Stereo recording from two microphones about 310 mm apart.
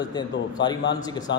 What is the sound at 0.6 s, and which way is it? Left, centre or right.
Speech, left.